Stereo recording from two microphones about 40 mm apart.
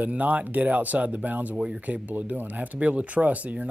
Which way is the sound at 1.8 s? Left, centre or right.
Right.